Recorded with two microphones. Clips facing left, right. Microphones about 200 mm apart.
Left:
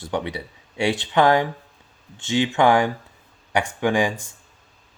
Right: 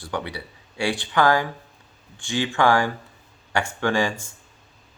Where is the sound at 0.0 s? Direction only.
20° left (ahead or behind).